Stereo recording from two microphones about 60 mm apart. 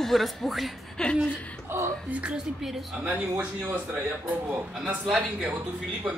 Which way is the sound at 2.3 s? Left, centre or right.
Centre.